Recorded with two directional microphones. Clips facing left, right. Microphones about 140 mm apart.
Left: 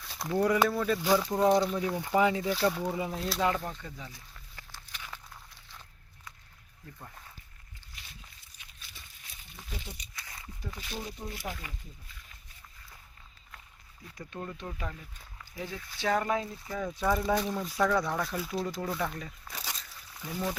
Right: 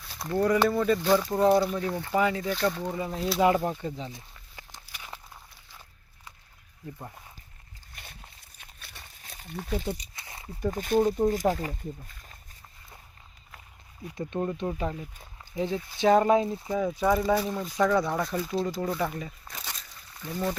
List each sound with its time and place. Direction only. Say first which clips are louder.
0.0 s speech: right 2 dB; centre (ahead or behind)
1.8 s speech: even; 10° left (ahead or behind)
2.4 s speech: right 1 dB; 5° left (ahead or behind)
3.4 s speech: right 8 dB; 20° right (ahead or behind)
4.5 s walk: right 2 dB; 15° right (ahead or behind)
7.9 s walk: right 6 dB; 55° right (ahead or behind)
8.5 s a sound: right 4 dB; 55° right (ahead or behind)
10.2 s a sound: right 2 dB; 25° right (ahead or behind)
10.6 s speech: right 17 dB; 50° right (ahead or behind)
14.2 s speech: right 10 dB; 25° right (ahead or behind)
16.8 s speech: right 4 dB; centre (ahead or behind)
19.6 s a sound: even; 5° left (ahead or behind)